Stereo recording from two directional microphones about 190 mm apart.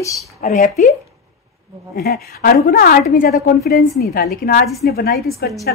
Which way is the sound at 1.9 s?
55° left (ahead or behind).